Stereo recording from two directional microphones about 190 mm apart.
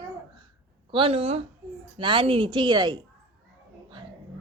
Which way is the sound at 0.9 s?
30° right (ahead or behind).